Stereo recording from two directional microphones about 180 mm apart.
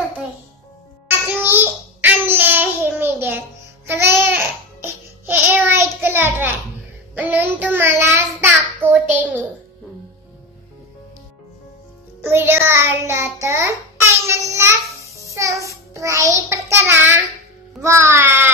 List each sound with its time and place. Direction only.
1.0 s child singing: 10° right (ahead or behind)
3.8 s babbling: 15° right (ahead or behind)
6.0 s a sound: 10° right (ahead or behind)
7.2 s child singing: 10° right (ahead or behind)
12.2 s music: 10° right (ahead or behind)
14.2 s child singing: 15° right (ahead or behind)
17.8 s music: 15° right (ahead or behind)